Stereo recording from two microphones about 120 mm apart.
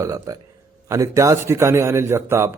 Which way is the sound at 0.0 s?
30° right (ahead or behind).